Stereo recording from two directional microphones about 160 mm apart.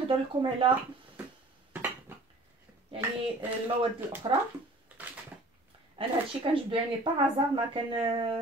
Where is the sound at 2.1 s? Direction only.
15° right (ahead or behind).